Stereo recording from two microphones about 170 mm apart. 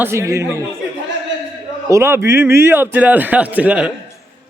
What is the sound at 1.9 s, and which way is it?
A man's voice, 15° right (ahead or behind).